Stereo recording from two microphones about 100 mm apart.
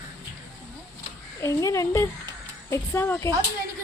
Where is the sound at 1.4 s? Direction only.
30° left (ahead or behind).